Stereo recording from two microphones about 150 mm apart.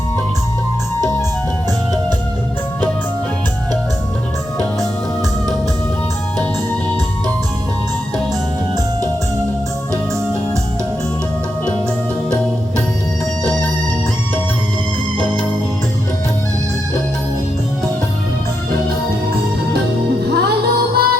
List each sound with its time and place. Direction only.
20.2 s music: 90° right